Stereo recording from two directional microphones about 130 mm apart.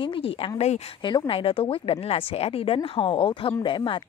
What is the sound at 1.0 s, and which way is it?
Speech, 35° left (ahead or behind).